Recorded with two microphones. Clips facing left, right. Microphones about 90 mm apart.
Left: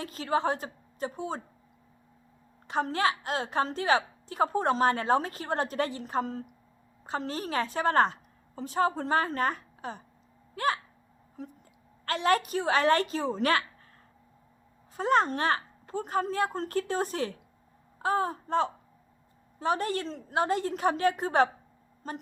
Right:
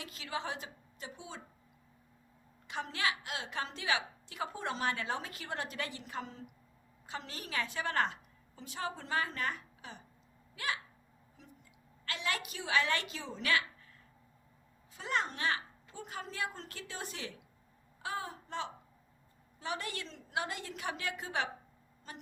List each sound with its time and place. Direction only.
0.0 s a woman's voice: 40° left (ahead or behind)
2.6 s a woman's voice: 40° left (ahead or behind)
10.5 s a sound: 40° left (ahead or behind)
11.4 s a woman's voice: 45° left (ahead or behind)
14.9 s a woman's voice: 40° left (ahead or behind)